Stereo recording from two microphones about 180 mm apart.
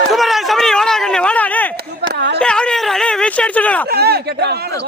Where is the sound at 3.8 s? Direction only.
60° right (ahead or behind).